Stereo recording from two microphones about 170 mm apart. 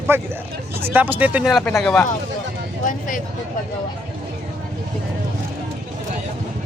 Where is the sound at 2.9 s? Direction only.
50° left (ahead or behind).